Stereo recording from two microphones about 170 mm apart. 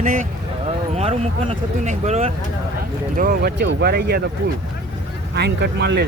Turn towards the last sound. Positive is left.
turn(degrees=-80)